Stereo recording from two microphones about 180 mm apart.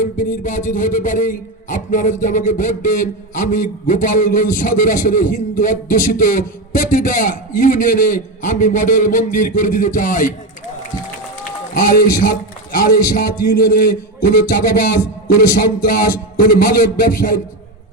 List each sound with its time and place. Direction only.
0.0 s speech: 45° left (ahead or behind)
11.7 s speech: 50° left (ahead or behind)